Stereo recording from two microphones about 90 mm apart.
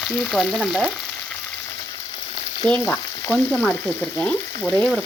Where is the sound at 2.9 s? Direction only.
15° left (ahead or behind).